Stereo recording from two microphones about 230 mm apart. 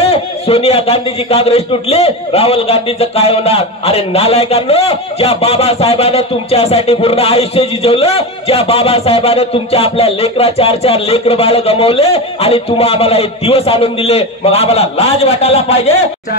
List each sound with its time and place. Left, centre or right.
0.0 s a man's voice: left